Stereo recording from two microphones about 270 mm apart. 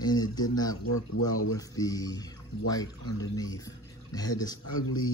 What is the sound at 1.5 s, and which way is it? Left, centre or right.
Speech, centre.